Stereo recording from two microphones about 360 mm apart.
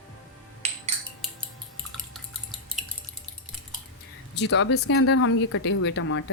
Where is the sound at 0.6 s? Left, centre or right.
Centre.